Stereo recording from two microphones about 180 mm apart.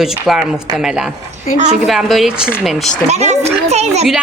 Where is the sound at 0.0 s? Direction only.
5° right (ahead or behind).